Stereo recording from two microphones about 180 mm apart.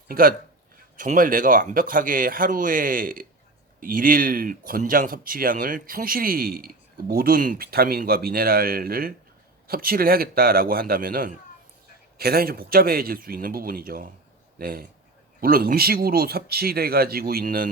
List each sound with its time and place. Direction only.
0.1 s speech: 55° right (ahead or behind)